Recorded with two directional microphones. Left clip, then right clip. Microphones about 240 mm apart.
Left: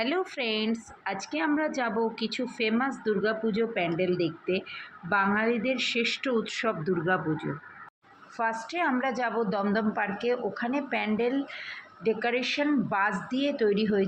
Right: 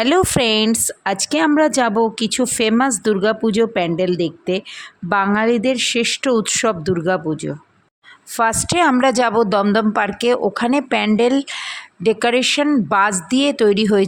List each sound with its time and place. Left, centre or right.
0.0 s a woman's voice: right
8.4 s a woman's voice: right